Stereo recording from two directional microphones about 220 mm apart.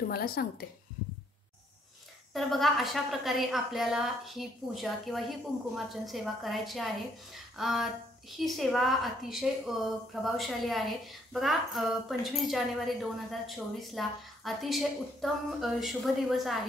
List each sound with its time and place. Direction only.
0.1 s speech: 45° left (ahead or behind)
2.3 s a woman's voice: centre (ahead or behind)